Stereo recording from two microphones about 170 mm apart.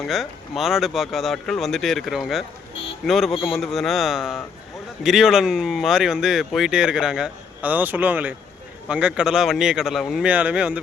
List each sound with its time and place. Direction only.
0.1 s speech: centre (ahead or behind)